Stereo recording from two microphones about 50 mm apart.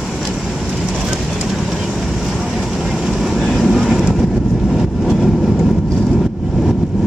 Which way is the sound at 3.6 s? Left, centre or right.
Centre.